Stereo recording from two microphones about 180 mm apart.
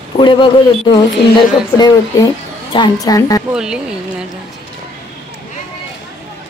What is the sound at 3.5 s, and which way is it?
Speech, 5° right (ahead or behind).